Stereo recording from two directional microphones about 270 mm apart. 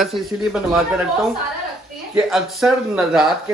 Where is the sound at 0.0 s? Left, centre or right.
Centre.